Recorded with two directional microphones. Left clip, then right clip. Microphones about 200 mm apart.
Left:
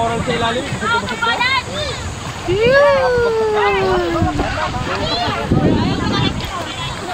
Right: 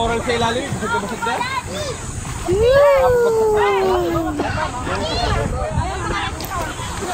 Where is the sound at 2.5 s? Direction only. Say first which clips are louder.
Left 1 dB; centre (ahead or behind).